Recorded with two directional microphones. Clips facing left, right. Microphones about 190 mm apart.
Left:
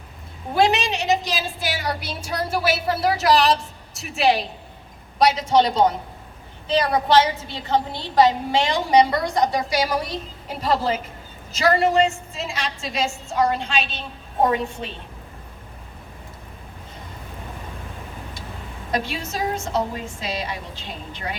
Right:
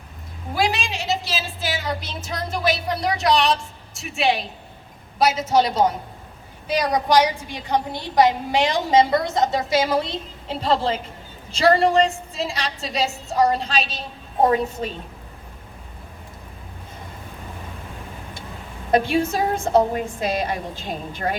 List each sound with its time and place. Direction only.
0.5 s a woman's voice: 20° left (ahead or behind); by 10.2 s 25° right (ahead or behind)
11.5 s a woman's voice: 30° right (ahead or behind)
18.9 s a woman's voice: 55° right (ahead or behind)